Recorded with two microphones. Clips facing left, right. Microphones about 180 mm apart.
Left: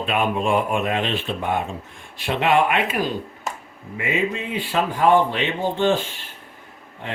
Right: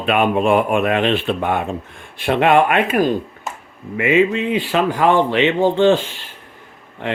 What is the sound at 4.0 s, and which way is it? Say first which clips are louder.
Speech: right 9 dB; 75° right (ahead or behind).